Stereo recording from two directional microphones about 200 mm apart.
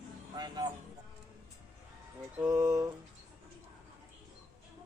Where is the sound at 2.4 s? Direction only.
15° right (ahead or behind).